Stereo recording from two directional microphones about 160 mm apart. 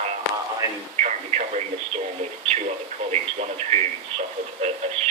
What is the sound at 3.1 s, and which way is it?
Speech, 45° right (ahead or behind).